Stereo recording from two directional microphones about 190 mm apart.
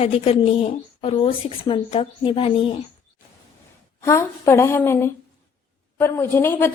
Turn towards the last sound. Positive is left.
turn(degrees=10)  # may be behind; listen again after turning